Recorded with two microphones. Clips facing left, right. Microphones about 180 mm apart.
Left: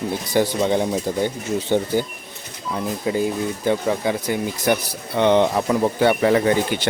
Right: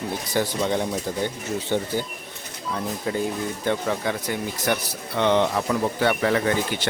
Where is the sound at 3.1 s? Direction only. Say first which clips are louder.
Left 5 dB; 10° left (ahead or behind).